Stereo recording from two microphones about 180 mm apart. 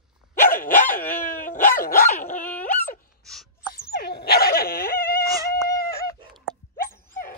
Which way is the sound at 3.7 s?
60° left (ahead or behind).